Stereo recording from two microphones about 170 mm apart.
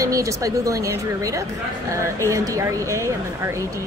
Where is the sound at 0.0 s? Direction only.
20° right (ahead or behind).